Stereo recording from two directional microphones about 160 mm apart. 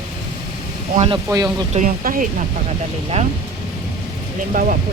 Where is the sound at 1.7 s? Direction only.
55° right (ahead or behind).